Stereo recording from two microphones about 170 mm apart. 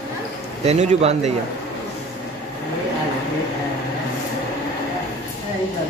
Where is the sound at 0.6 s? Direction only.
40° right (ahead or behind).